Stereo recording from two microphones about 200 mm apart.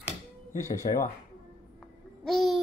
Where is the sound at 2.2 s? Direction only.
Centre (ahead or behind).